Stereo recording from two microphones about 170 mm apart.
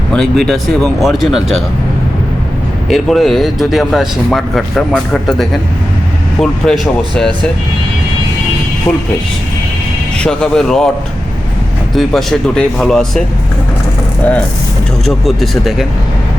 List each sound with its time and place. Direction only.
0.1 s speech: 5° left (ahead or behind)
2.9 s speech: centre (ahead or behind)
10.2 s speech: 5° left (ahead or behind)
11.9 s speech: centre (ahead or behind)
15.0 s speech: centre (ahead or behind)